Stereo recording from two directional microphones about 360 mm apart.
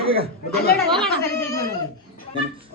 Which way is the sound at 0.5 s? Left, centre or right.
Left.